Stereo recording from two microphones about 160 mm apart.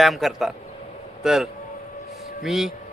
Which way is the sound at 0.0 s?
Centre (ahead or behind).